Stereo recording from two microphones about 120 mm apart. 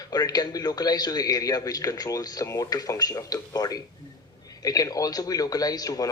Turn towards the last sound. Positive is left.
turn(degrees=30)  # may be behind; listen again after turning